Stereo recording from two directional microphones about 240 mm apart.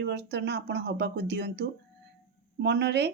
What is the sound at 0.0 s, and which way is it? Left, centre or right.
Speech, right.